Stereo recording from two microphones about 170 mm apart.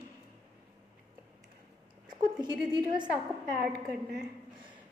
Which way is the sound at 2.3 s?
25° right (ahead or behind).